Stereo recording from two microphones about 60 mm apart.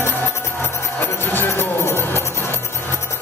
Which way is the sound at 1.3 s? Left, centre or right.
Left.